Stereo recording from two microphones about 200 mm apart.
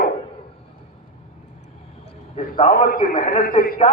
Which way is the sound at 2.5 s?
45° left (ahead or behind).